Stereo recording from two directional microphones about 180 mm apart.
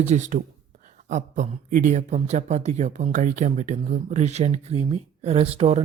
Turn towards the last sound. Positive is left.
turn(degrees=-35)  # may be behind; listen again after turning